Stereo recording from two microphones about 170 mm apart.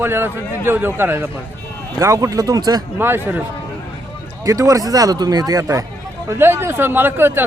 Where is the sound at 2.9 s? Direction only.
15° right (ahead or behind).